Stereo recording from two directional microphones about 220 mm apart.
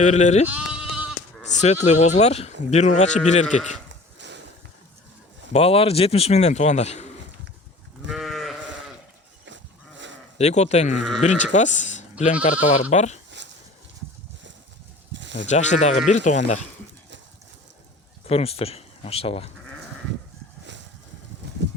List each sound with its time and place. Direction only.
0.0 s speech: 30° left (ahead or behind)
0.4 s sheep: 5° right (ahead or behind)
1.5 s speech: 30° left (ahead or behind)
3.8 s a sound: 55° right (ahead or behind)
5.5 s speech: 25° left (ahead or behind)
8.0 s sheep: centre (ahead or behind)
10.3 s speech: 30° left (ahead or behind)
15.1 s a sound: 55° right (ahead or behind)
15.4 s speech: 30° left (ahead or behind)
18.3 s speech: 25° left (ahead or behind)
21.4 s a sound: 50° right (ahead or behind)